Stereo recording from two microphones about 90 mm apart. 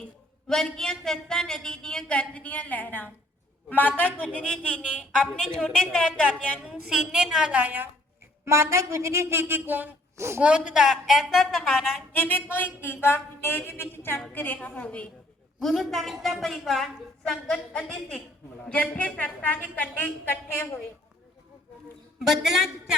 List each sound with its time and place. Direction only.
0.4 s speech: 5° left (ahead or behind)
6.6 s a woman's voice: 10° right (ahead or behind)
8.4 s a woman's voice: 35° right (ahead or behind)
10.4 s a woman's voice: 10° right (ahead or behind)
12.1 s speech: 20° left (ahead or behind)
15.6 s a woman's voice: centre (ahead or behind); by 20.7 s 20° left (ahead or behind)
22.2 s a woman's voice: 5° right (ahead or behind)